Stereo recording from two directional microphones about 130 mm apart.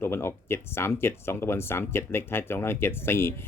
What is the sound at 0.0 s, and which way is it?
Speech, 20° left (ahead or behind).